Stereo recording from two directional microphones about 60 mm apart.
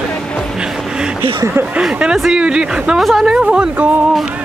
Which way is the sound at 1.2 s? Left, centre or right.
Right.